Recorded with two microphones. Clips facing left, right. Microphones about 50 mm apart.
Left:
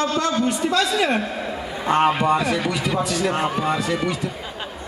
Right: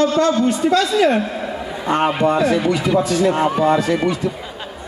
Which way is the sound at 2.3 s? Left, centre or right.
Right.